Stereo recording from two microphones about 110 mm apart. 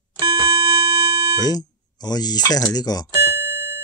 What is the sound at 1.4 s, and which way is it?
Speech, 35° left (ahead or behind).